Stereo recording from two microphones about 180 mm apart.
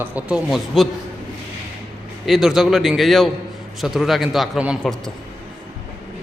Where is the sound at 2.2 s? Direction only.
Centre (ahead or behind).